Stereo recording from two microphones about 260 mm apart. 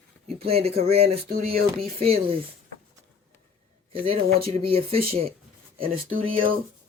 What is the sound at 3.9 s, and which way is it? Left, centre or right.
Speech, right.